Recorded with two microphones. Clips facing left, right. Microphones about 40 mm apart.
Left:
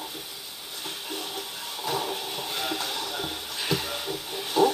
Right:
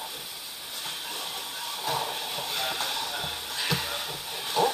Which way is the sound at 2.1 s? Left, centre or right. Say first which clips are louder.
Even; right.